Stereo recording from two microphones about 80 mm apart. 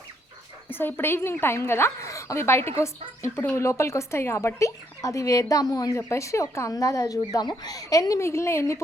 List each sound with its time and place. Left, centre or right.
0.7 s a woman's voice: left
7.3 s a woman's voice: left